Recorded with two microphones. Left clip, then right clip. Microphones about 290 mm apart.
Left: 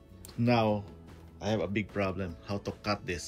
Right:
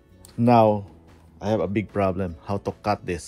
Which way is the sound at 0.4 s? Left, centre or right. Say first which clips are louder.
Right 11 dB; centre.